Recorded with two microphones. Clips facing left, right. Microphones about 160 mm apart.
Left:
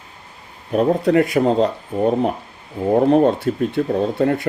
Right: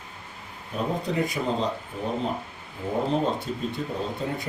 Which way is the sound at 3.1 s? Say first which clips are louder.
Left 11 dB; 65° left (ahead or behind).